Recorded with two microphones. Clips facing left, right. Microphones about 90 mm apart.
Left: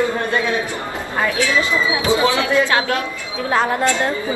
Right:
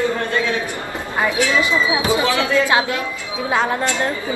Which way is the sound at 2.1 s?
25° left (ahead or behind).